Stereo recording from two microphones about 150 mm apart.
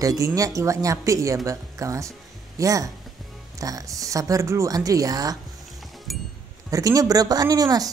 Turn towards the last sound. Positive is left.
turn(degrees=-25)  # may be behind; listen again after turning